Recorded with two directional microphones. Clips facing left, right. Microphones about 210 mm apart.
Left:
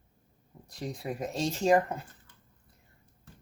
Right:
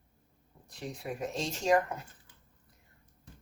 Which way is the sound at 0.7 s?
35° left (ahead or behind).